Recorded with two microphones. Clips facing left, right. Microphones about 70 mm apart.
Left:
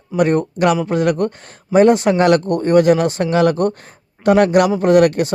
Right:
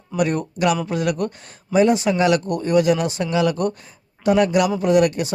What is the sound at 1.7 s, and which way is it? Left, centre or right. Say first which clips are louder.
Speech: left 5 dB; left.